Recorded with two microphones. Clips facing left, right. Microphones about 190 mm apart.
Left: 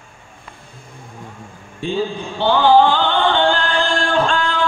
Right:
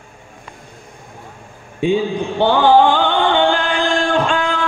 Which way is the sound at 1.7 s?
15° right (ahead or behind).